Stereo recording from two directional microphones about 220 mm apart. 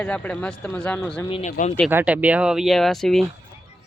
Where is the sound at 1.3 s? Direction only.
30° left (ahead or behind).